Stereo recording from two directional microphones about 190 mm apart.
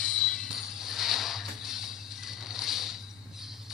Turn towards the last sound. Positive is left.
turn(degrees=0)  # may be behind; listen again after turning